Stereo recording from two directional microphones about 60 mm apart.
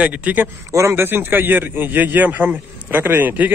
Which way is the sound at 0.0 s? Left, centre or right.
Right.